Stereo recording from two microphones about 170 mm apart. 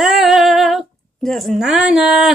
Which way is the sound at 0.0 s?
Centre (ahead or behind).